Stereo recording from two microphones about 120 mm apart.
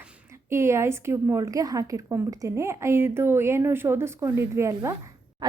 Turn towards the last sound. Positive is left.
turn(degrees=-25)  # may be behind; listen again after turning